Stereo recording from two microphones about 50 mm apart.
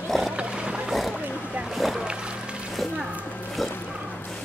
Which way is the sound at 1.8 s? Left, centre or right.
Centre.